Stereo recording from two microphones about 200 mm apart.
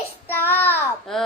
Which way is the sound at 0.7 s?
Centre (ahead or behind).